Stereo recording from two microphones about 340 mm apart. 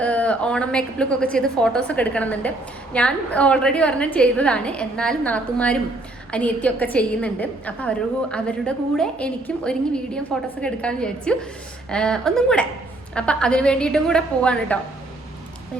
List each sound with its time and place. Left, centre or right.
0.0 s a woman's voice: centre